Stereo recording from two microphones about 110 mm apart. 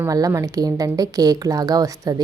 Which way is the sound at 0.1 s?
30° right (ahead or behind).